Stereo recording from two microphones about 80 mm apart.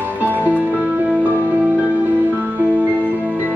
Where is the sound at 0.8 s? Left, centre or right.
Centre.